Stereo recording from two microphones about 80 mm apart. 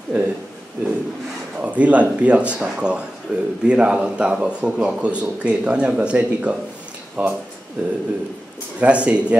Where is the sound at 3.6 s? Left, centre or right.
Centre.